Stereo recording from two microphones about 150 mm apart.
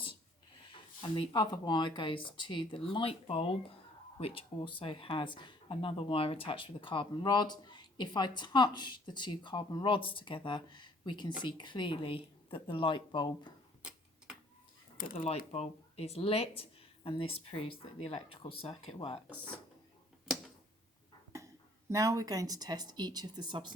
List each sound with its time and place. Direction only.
1.0 s speech: 35° left (ahead or behind)
15.1 s speech: 40° left (ahead or behind)
21.3 s speech: 20° right (ahead or behind)